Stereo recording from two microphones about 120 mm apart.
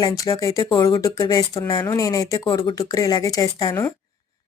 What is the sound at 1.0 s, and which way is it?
Speech, 30° left (ahead or behind).